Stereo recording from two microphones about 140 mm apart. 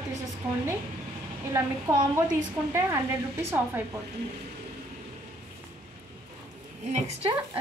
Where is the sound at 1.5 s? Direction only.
20° right (ahead or behind).